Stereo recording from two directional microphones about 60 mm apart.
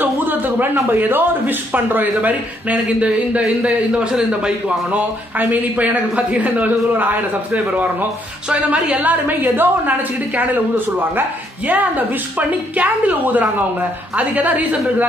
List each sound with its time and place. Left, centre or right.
0.0 s a man's voice: right